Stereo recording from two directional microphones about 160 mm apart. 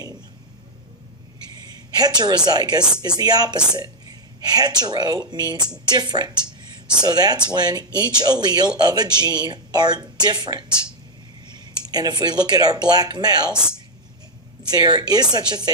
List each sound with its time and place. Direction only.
2.0 s speech: 25° right (ahead or behind)
13.5 s speech: 5° right (ahead or behind)
14.7 s speech: 25° right (ahead or behind)